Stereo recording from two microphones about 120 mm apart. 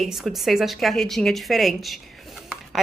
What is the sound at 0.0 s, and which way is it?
A woman's voice, centre (ahead or behind).